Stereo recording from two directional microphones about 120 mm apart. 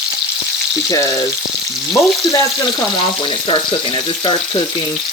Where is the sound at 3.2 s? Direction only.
40° left (ahead or behind).